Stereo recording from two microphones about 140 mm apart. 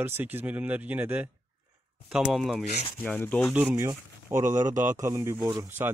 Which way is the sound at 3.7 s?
20° right (ahead or behind).